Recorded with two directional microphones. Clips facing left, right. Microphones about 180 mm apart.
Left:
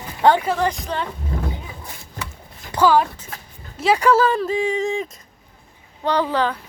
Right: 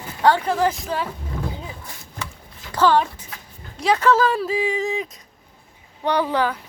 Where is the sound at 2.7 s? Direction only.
10° left (ahead or behind).